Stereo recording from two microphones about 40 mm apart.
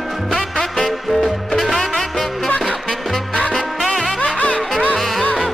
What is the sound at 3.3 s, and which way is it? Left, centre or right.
Music, left.